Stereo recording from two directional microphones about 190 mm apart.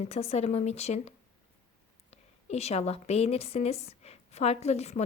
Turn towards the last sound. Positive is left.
turn(degrees=35)  # may be behind; listen again after turning